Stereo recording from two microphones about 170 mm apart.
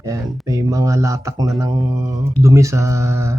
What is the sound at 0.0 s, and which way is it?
Speech, 20° right (ahead or behind).